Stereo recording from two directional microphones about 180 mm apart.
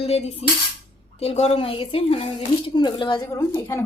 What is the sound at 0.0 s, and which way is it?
A woman's voice, 35° left (ahead or behind).